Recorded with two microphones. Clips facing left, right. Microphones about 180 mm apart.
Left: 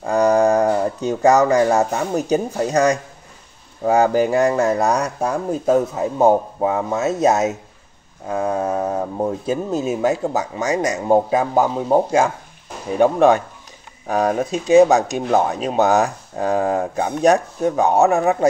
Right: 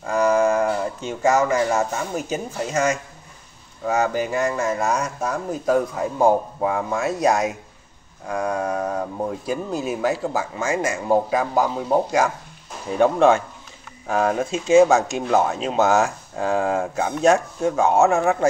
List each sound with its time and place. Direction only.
0.0 s speech: 35° left (ahead or behind)
13.0 s speech: 15° left (ahead or behind)